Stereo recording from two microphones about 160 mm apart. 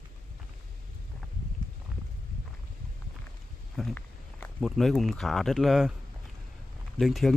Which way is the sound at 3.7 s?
Centre (ahead or behind).